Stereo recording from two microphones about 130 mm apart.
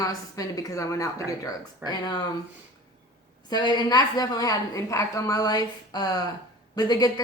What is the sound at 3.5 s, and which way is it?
A woman's voice, 35° left (ahead or behind).